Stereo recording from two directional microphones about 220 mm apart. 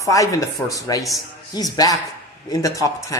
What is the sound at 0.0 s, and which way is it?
Speech, 15° left (ahead or behind).